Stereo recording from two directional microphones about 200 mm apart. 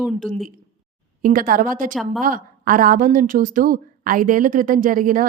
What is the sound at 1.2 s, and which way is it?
A woman's voice, 45° right (ahead or behind).